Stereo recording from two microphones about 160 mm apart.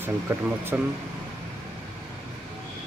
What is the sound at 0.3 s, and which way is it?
Speech, 15° right (ahead or behind).